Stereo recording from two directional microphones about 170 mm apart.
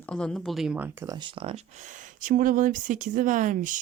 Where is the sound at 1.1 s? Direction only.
30° right (ahead or behind).